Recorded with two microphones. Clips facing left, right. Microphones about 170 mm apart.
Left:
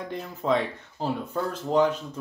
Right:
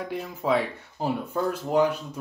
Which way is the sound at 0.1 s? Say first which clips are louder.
Even; 5° right (ahead or behind).